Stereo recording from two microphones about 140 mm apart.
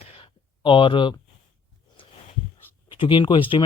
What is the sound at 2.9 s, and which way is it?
Speech, 35° left (ahead or behind).